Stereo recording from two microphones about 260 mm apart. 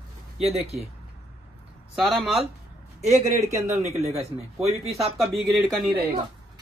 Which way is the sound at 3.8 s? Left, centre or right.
Right.